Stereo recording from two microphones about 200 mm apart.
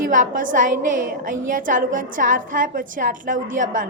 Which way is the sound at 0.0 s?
40° right (ahead or behind).